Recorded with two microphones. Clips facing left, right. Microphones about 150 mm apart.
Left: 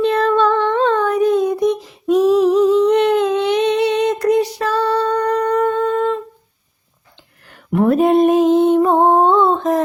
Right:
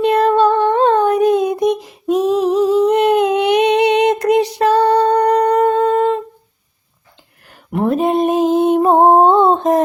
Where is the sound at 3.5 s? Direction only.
65° right (ahead or behind).